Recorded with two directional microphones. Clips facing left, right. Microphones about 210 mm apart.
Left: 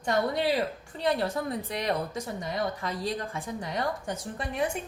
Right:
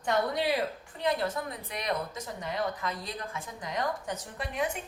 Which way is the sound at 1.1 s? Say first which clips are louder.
Left 3 dB; 30° left (ahead or behind).